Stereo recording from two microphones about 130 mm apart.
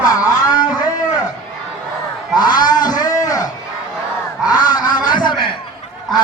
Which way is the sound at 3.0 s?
30° left (ahead or behind).